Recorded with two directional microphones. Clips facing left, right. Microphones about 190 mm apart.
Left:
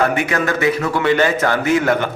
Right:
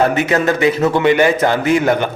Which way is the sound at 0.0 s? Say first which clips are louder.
Right 3 dB; 25° right (ahead or behind).